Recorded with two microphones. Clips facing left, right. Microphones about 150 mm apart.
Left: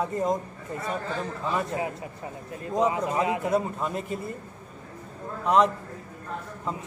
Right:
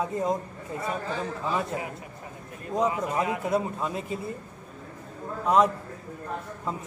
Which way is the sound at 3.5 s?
Centre (ahead or behind).